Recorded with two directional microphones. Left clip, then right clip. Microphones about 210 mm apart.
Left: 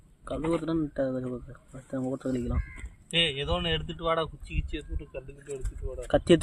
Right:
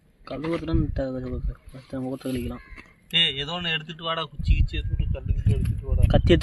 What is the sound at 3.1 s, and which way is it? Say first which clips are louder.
Speech: right 4 dB; 15° left (ahead or behind).